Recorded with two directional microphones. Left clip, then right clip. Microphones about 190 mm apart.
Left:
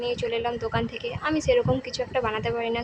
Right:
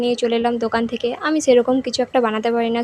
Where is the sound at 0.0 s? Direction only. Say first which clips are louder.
Right 8 dB; 35° right (ahead or behind).